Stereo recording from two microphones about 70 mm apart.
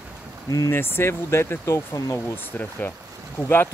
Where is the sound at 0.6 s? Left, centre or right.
Left.